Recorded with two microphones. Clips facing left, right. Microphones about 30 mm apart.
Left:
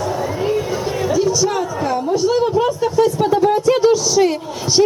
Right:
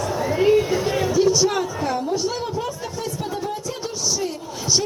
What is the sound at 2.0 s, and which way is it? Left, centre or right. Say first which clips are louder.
Speech: left 8 dB; centre.